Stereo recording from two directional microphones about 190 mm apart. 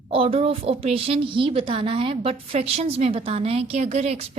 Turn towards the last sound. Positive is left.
turn(degrees=-35)  # may be behind; listen again after turning